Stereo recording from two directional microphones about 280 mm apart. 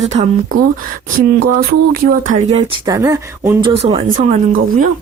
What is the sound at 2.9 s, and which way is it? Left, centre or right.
Speech, centre.